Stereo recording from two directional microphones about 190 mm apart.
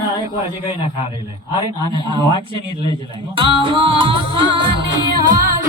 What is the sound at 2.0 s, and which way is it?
Speech, 25° right (ahead or behind).